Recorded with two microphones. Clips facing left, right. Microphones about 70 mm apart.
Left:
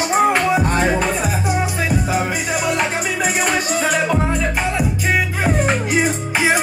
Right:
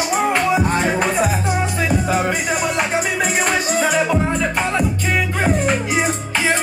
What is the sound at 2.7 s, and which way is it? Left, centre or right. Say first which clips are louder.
Music: right 1 dB; centre.